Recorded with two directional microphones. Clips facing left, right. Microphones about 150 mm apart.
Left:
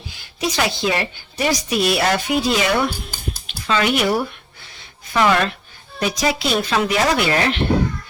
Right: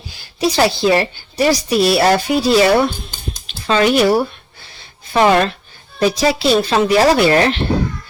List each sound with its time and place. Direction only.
0.1 s a woman's voice: 35° right (ahead or behind)
3.4 s a sound: 35° right (ahead or behind)
6.0 s a woman's voice: 30° right (ahead or behind)